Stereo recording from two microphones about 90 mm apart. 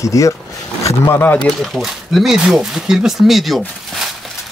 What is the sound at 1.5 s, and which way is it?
Speech, centre (ahead or behind).